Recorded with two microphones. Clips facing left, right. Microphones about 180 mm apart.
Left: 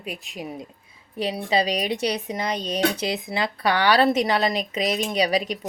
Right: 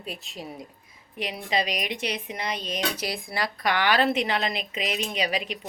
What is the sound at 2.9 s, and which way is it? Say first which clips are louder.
Speech: left 4 dB; 25° left (ahead or behind).